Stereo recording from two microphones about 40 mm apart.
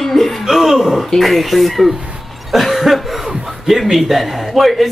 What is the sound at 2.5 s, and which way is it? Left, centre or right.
Cough, centre.